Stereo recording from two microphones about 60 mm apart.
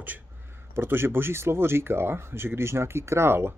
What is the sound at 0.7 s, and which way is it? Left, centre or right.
Speech, right.